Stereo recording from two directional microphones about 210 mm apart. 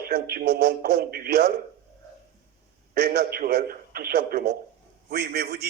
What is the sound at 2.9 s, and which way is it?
A man's voice, 50° right (ahead or behind).